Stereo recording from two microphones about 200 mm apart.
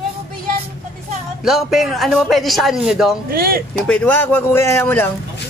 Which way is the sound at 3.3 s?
50° right (ahead or behind).